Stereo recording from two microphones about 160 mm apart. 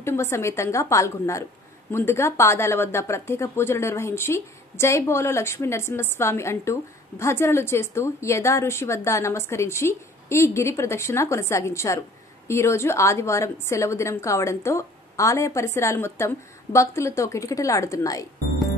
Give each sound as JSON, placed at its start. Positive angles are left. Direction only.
{"t": 0.0, "sound": "a woman's voice", "side_deg": 15}